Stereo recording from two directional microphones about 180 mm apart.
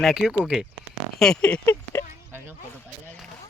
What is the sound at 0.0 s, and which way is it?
Speech, centre (ahead or behind).